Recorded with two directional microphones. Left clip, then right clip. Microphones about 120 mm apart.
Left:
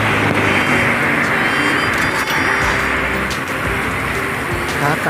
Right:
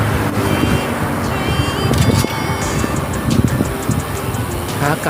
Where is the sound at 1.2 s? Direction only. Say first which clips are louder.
Left 5 dB; centre (ahead or behind).